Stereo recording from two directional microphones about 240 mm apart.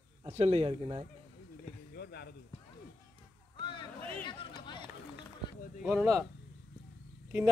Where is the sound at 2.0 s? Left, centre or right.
Left.